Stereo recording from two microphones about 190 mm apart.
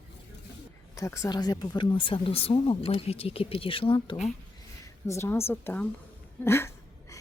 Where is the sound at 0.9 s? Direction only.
15° left (ahead or behind).